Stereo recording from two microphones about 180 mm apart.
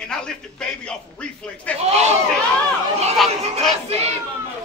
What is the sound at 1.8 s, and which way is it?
Speech, 35° right (ahead or behind).